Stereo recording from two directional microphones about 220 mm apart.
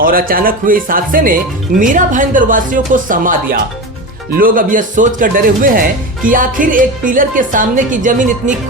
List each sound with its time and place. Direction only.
0.0 s speech: 40° right (ahead or behind)